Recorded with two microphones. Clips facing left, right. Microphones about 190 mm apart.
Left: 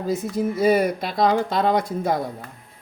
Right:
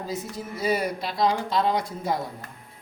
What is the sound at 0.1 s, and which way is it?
Speech, 50° left (ahead or behind).